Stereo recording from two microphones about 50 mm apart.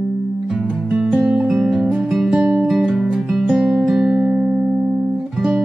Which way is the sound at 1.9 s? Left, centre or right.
Centre.